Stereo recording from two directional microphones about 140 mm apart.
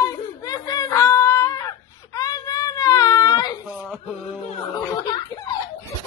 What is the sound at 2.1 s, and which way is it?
Whimper, 25° left (ahead or behind).